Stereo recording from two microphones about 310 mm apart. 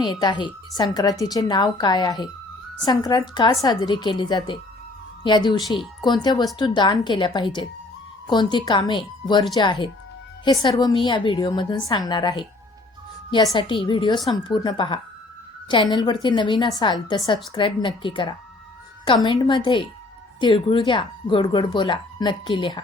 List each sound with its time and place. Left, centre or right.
0.0 s speech: centre